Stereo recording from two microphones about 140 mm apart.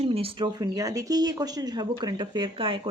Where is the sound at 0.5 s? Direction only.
25° right (ahead or behind).